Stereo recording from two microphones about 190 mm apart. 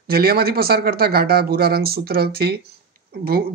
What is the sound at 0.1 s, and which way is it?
Speech, 55° right (ahead or behind).